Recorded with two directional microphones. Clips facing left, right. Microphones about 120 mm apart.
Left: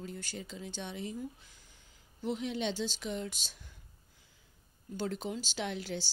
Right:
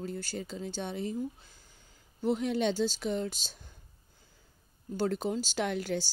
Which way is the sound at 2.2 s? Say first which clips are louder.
Right 6 dB; 45° right (ahead or behind).